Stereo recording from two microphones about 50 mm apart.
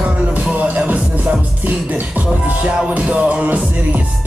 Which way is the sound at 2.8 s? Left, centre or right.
Right.